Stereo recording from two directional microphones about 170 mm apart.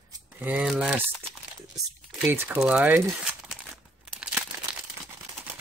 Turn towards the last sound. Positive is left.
turn(degrees=-5)  # may be behind; listen again after turning